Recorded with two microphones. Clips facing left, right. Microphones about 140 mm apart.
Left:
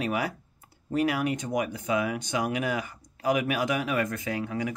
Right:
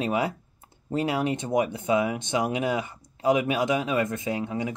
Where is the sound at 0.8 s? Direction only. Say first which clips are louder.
Even; 25° right (ahead or behind).